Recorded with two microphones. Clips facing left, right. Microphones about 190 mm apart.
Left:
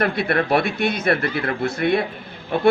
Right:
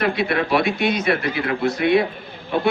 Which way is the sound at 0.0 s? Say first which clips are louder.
Even; 55° left (ahead or behind).